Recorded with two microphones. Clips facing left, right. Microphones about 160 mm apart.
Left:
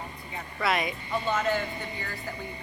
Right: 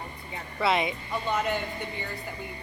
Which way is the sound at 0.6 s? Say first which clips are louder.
Right 2 dB; 25° right (ahead or behind).